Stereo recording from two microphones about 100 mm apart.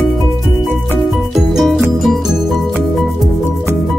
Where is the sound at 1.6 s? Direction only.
Centre (ahead or behind).